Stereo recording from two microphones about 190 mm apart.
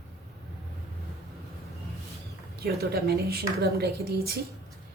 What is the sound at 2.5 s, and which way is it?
A woman's voice, 55° right (ahead or behind).